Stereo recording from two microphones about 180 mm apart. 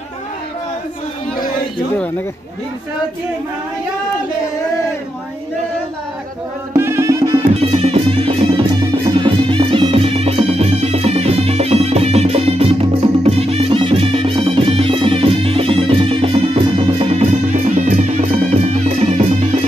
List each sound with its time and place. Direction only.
6.7 s music: 15° right (ahead or behind)
7.3 s music: 35° right (ahead or behind)
17.7 s music: 45° right (ahead or behind)